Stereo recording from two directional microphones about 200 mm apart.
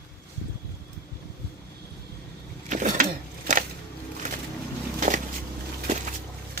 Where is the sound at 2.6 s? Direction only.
35° right (ahead or behind).